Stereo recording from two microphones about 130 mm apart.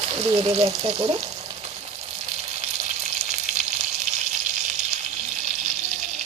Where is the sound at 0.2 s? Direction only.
55° right (ahead or behind).